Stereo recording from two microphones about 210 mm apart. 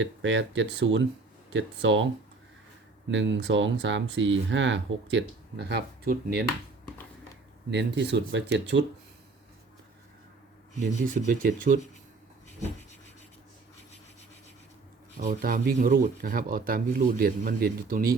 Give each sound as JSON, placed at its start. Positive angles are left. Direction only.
{"t": 0.0, "sound": "speech", "side_deg": -60}
{"t": 3.1, "sound": "speech", "side_deg": -60}
{"t": 7.7, "sound": "speech", "side_deg": -55}
{"t": 10.8, "sound": "speech", "side_deg": -40}
{"t": 15.2, "sound": "speech", "side_deg": -40}